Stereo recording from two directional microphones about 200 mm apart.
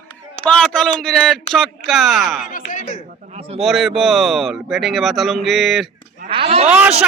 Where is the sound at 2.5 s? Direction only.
40° left (ahead or behind).